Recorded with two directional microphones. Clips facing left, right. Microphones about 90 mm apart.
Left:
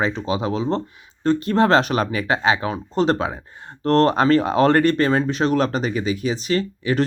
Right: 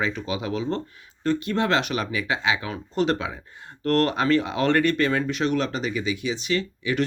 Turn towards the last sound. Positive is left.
turn(degrees=40)  # may be behind; listen again after turning